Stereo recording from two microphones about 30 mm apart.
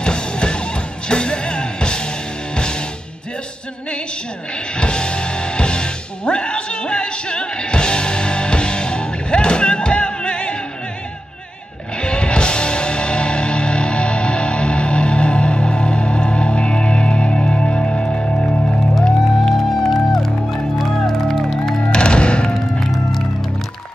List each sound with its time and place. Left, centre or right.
0.0 s music: left
4.7 s music: left
12.0 s music: left
19.4 s music: centre
21.9 s music: left